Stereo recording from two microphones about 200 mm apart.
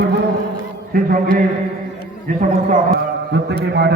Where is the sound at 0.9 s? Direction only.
45° right (ahead or behind).